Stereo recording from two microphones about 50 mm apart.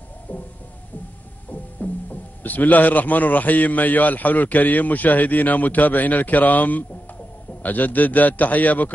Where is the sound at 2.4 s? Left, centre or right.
Left.